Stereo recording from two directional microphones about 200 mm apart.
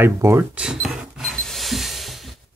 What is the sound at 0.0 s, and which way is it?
Cash register, 10° right (ahead or behind).